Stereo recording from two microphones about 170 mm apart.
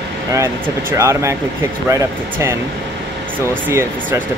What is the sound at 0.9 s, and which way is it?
Speech, 15° right (ahead or behind).